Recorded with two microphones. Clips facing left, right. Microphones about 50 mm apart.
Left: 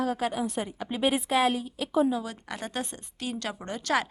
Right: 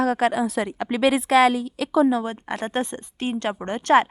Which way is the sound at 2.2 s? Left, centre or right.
Right.